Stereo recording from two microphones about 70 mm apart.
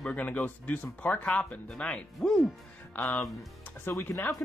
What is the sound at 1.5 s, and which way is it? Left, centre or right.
Speech, centre.